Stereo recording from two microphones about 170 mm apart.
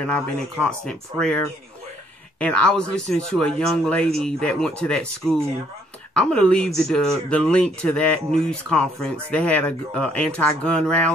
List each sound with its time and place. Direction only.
0.0 s speech: 5° left (ahead or behind)